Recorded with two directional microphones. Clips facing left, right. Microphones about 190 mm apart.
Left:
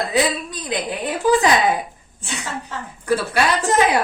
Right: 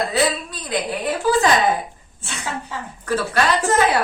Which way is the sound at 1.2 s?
15° left (ahead or behind).